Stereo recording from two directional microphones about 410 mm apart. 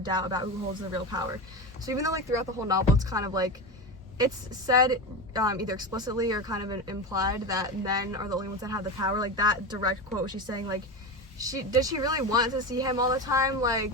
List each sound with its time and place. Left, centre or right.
0.0 s a woman's voice: centre
1.9 s a woman's voice: centre